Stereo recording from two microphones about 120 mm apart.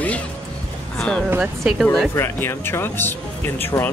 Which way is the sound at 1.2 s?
10° right (ahead or behind).